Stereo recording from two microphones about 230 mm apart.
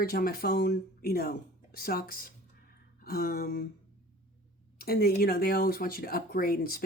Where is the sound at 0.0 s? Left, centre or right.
Left.